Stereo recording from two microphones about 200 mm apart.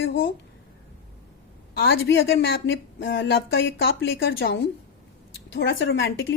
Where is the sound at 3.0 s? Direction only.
50° left (ahead or behind).